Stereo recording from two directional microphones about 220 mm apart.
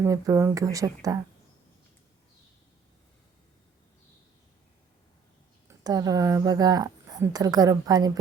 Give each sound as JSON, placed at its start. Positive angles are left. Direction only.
{"t": 0.0, "sound": "a woman's voice", "side_deg": -15}
{"t": 5.6, "sound": "a woman's voice", "side_deg": -15}